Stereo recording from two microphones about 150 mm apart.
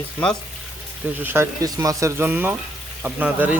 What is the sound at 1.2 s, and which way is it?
Speech, 15° right (ahead or behind).